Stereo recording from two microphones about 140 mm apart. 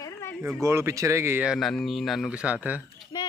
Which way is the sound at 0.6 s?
20° right (ahead or behind).